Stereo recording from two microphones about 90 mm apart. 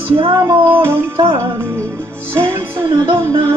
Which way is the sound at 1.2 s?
55° right (ahead or behind).